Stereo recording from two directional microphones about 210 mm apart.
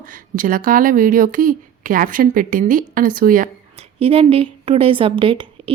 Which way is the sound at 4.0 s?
25° right (ahead or behind).